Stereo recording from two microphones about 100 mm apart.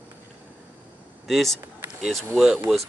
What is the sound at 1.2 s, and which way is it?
Speech, centre (ahead or behind).